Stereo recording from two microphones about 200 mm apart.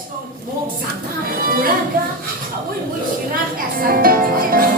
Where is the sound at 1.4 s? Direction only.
45° right (ahead or behind).